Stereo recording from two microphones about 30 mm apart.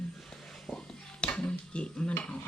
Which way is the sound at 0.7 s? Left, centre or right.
Left.